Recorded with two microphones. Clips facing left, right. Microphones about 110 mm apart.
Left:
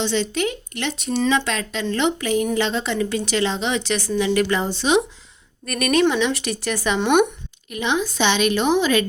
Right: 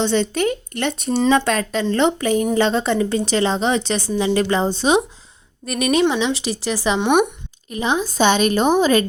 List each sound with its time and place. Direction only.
0.0 s a woman's voice: 45° right (ahead or behind)
5.6 s speech: 25° right (ahead or behind)
7.0 s speech: 10° right (ahead or behind)
7.7 s a woman's voice: 35° right (ahead or behind)